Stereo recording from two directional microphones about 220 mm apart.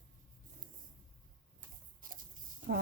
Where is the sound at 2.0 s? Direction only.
40° right (ahead or behind).